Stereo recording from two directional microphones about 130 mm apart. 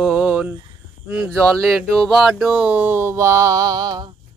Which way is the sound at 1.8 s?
5° left (ahead or behind).